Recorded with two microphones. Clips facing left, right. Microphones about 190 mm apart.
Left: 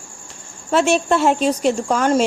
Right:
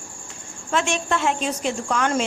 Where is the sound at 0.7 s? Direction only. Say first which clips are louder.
Left 7 dB; 40° left (ahead or behind).